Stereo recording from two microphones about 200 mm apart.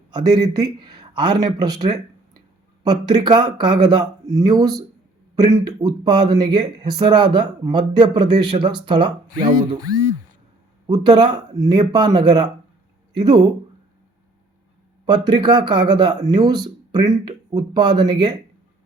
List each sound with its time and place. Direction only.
0.1 s speech: 20° right (ahead or behind)
15.0 s speech: 20° right (ahead or behind)